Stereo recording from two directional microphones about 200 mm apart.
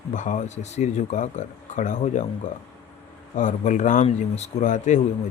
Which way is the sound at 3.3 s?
40° left (ahead or behind).